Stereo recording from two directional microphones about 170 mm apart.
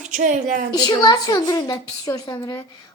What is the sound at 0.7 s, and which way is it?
A woman's voice, 25° left (ahead or behind).